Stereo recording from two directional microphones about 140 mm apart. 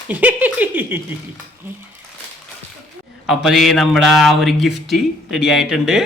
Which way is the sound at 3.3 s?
Centre (ahead or behind).